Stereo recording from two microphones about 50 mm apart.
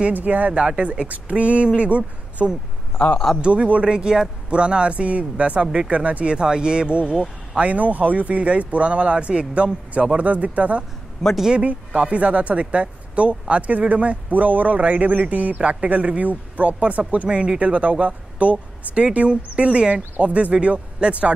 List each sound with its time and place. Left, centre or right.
0.1 s speech: right
6.3 s speech: centre
11.2 s speech: centre
11.5 s speech: right